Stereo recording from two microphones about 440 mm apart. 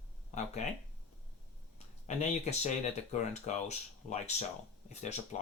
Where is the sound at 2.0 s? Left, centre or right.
Centre.